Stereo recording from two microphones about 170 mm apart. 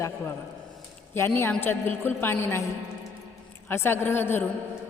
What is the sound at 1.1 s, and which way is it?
A woman's voice, 15° left (ahead or behind).